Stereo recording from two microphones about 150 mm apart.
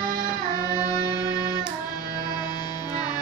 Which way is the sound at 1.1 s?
25° left (ahead or behind).